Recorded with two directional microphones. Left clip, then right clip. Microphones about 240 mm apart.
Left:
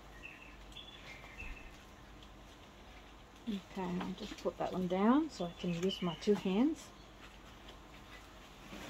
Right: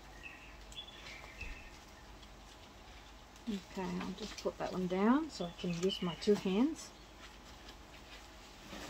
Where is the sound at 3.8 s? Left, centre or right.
Centre.